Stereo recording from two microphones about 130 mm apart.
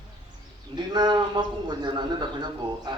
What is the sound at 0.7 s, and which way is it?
A man's voice, 35° right (ahead or behind).